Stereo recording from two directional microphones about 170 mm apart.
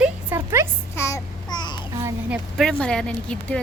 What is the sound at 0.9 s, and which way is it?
Babbling, 15° left (ahead or behind).